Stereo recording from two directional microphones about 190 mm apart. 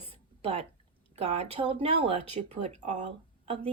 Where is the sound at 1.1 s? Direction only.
35° right (ahead or behind).